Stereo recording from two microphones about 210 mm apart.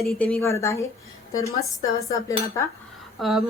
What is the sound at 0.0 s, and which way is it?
A woman's voice, 5° left (ahead or behind).